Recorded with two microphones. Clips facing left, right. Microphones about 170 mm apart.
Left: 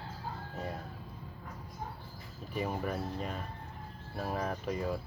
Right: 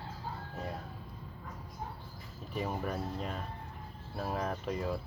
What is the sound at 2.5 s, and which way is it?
Speech, centre (ahead or behind).